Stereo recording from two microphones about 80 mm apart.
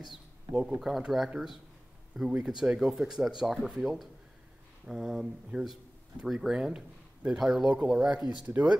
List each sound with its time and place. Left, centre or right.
0.5 s speech: right
0.7 s speech: centre
2.3 s speech: centre